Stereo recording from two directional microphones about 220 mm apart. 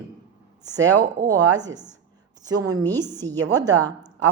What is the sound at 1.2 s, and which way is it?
Speech, 15° right (ahead or behind).